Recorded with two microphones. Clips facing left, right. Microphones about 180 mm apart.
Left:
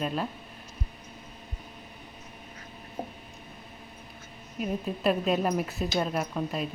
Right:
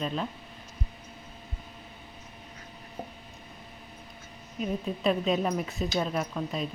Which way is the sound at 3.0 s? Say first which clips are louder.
Left 3 dB; 40° left (ahead or behind).